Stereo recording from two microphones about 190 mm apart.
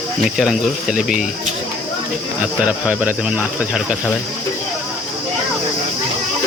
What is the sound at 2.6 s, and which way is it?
Speech, 5° right (ahead or behind).